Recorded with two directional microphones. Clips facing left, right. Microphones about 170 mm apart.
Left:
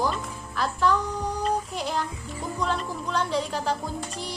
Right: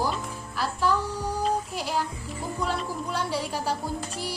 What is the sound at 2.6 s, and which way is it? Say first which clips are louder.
Speech: left 1 dB; 5° right (ahead or behind).